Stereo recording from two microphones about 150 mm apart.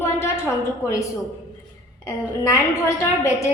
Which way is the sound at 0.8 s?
20° left (ahead or behind).